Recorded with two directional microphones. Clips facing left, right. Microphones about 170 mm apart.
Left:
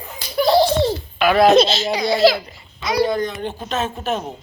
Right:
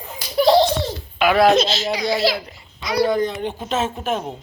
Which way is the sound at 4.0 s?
10° right (ahead or behind).